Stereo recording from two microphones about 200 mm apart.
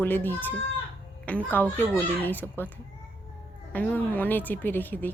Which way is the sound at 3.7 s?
10° left (ahead or behind).